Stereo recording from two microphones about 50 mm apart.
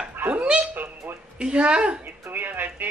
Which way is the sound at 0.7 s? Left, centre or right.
Right.